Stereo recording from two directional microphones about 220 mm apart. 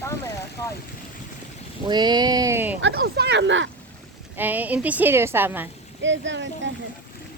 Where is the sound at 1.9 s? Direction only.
20° right (ahead or behind).